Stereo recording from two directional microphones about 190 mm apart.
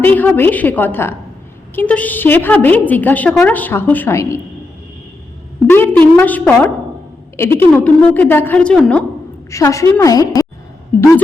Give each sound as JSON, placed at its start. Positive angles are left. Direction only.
{"t": 0.0, "sound": "a woman's voice", "side_deg": 10}
{"t": 5.6, "sound": "a woman's voice", "side_deg": 10}
{"t": 9.5, "sound": "a woman's voice", "side_deg": 15}